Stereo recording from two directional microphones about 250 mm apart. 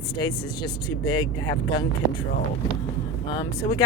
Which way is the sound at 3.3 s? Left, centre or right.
Centre.